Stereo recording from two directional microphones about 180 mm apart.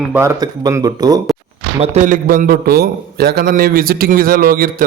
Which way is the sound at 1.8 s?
40° right (ahead or behind).